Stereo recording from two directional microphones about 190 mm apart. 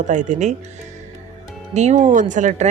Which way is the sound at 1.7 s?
40° right (ahead or behind).